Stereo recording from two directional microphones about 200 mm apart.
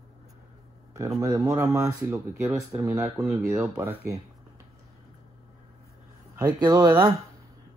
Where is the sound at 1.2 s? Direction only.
15° right (ahead or behind).